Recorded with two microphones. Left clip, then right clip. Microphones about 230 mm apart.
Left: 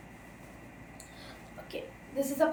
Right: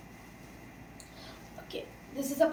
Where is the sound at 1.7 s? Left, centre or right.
Centre.